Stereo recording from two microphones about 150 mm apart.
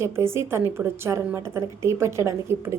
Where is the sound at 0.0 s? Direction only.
15° right (ahead or behind).